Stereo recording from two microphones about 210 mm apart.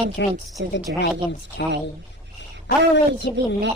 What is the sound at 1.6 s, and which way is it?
Speech, 55° left (ahead or behind).